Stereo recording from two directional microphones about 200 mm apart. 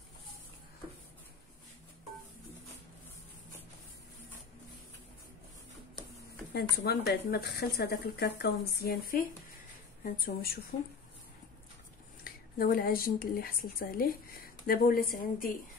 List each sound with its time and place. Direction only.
6.5 s speech: 50° left (ahead or behind)
12.2 s speech: 45° left (ahead or behind)